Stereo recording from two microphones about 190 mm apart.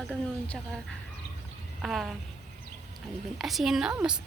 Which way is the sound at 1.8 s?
Centre (ahead or behind).